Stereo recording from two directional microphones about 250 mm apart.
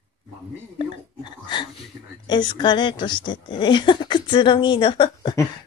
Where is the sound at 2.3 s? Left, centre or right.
Centre.